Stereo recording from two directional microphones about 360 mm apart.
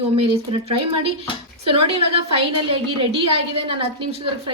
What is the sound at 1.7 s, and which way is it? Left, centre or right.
A woman's voice, centre.